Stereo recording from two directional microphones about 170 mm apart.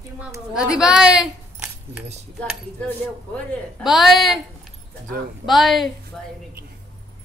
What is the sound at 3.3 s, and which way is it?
A man's voice, 5° left (ahead or behind).